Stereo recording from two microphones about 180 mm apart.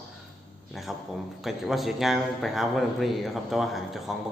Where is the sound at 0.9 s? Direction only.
Centre (ahead or behind).